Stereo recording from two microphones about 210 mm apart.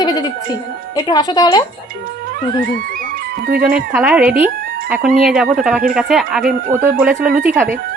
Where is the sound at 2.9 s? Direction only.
45° right (ahead or behind).